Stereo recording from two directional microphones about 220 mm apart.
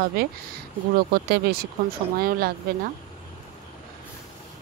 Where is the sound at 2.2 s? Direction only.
40° right (ahead or behind).